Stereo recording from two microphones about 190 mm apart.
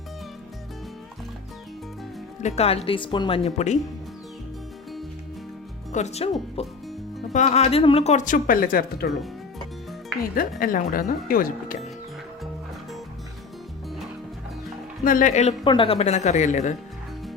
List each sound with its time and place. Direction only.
2.4 s speech: 35° left (ahead or behind)
5.9 s speech: 35° left (ahead or behind)
10.6 s speech: 45° left (ahead or behind)
15.0 s speech: 45° left (ahead or behind)
15.6 s speech: 25° left (ahead or behind)